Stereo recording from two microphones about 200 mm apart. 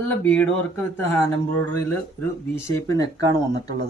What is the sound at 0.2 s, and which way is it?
Speech, 10° left (ahead or behind).